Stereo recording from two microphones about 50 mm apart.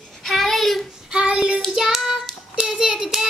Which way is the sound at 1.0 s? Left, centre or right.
Right.